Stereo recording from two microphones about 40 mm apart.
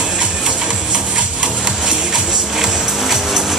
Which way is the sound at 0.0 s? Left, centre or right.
Centre.